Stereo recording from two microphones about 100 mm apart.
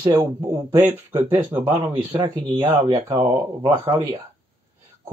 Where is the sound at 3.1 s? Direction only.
55° right (ahead or behind).